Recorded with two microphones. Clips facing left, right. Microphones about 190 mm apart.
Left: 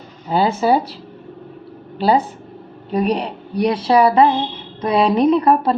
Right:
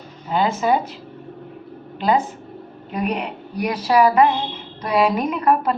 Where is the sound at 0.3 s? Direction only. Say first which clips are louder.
Left 3 dB; 35° left (ahead or behind).